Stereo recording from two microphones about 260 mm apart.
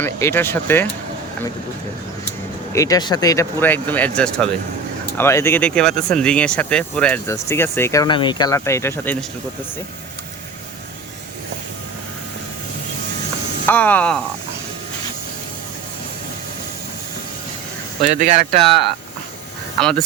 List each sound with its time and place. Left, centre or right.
0.0 s speech: centre
2.7 s speech: centre
13.7 s speech: centre
18.0 s speech: right
19.8 s speech: centre